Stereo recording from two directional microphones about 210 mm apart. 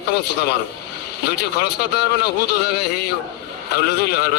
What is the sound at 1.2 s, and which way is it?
A man's voice, 50° left (ahead or behind).